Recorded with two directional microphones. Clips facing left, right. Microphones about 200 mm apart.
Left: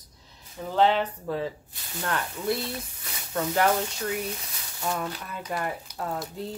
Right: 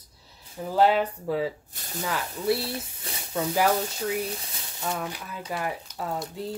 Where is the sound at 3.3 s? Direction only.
5° right (ahead or behind).